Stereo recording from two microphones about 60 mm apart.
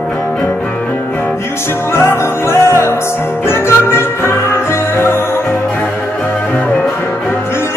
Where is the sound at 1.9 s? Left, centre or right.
Left.